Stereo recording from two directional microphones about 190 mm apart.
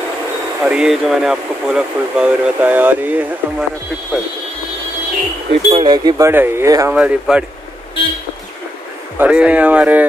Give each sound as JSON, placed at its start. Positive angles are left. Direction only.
{"t": 0.7, "sound": "speech", "side_deg": -5}
{"t": 5.7, "sound": "speech", "side_deg": -25}
{"t": 7.0, "sound": "speech", "side_deg": -5}
{"t": 9.2, "sound": "speech", "side_deg": -5}